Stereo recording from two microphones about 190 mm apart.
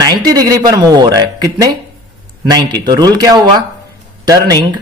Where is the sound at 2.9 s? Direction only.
20° right (ahead or behind).